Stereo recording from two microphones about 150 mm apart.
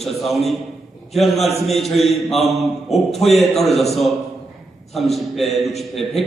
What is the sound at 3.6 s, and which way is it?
Speech, 45° left (ahead or behind).